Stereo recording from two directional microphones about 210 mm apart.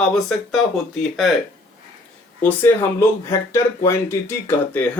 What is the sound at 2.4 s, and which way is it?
Speech, 10° left (ahead or behind).